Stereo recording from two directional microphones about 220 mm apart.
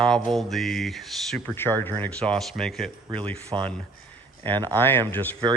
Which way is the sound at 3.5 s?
20° right (ahead or behind).